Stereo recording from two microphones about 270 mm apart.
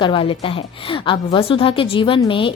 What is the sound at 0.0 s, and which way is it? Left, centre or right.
A woman's voice, centre.